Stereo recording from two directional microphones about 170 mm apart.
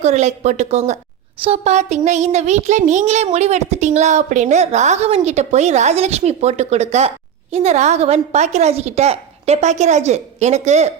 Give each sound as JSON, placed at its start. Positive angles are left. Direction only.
{"t": 0.0, "sound": "a child's voice", "side_deg": -40}